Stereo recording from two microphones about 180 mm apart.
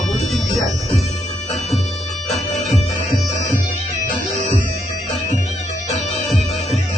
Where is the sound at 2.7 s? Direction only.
40° left (ahead or behind).